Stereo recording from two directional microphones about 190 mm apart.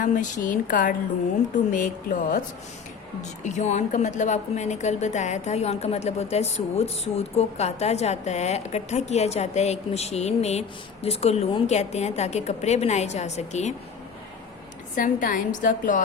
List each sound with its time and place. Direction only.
0.0 s a woman's voice: 45° left (ahead or behind)
3.4 s a woman's voice: 35° left (ahead or behind)
14.9 s a woman's voice: 45° left (ahead or behind)